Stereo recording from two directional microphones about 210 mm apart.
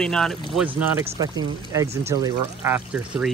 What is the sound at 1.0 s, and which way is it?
Speech, 20° right (ahead or behind).